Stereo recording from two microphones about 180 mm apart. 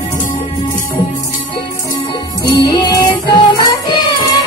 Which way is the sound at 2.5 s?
25° left (ahead or behind).